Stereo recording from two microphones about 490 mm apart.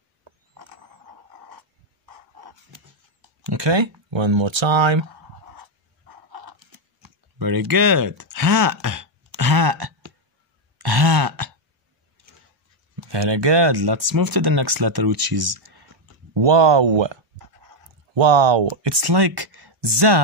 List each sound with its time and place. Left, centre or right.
3.4 s speech: right
5.5 s dog: right
7.0 s a sound: right
12.9 s speech: right
16.3 s speech: right
18.8 s speech: right